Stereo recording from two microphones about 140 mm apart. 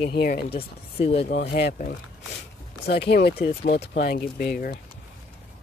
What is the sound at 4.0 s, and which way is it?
Speech, 90° left.